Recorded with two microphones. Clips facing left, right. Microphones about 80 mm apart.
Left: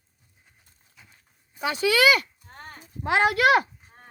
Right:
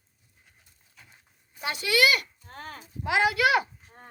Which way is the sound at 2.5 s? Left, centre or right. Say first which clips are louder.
Right 4 dB; right.